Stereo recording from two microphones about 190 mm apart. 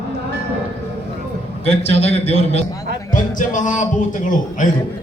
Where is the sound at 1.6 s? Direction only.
35° left (ahead or behind).